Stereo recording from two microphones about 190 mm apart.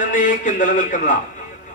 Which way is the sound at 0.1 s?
45° left (ahead or behind).